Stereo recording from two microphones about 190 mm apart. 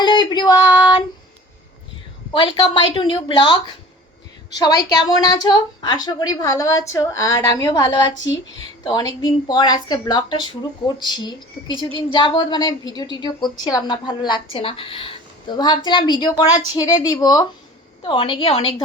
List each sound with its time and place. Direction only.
0.0 s female singing: 25° left (ahead or behind)
2.3 s speech: 25° left (ahead or behind)